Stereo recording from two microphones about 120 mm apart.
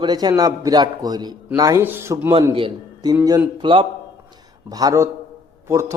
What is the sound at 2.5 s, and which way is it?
A man's voice, 40° right (ahead or behind).